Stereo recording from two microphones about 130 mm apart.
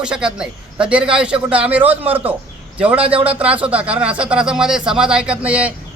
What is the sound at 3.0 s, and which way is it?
Speech, 45° right (ahead or behind).